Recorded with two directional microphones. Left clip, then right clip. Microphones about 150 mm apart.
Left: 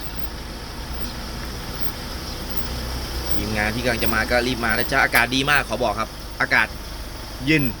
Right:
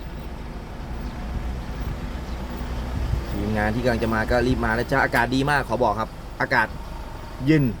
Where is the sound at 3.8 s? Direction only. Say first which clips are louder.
Left 1 dB; 50° right (ahead or behind).